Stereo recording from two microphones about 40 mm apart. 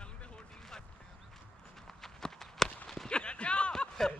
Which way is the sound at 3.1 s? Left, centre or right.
Left.